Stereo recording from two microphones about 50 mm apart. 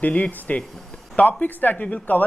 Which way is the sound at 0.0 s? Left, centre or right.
Left.